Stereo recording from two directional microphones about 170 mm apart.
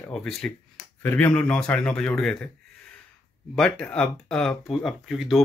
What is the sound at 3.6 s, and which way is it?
Speech, 5° left (ahead or behind).